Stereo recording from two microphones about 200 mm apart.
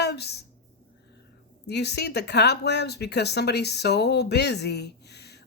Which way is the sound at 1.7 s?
55° left (ahead or behind).